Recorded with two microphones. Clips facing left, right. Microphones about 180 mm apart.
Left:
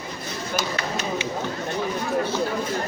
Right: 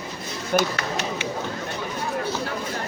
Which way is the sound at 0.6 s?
60° right (ahead or behind).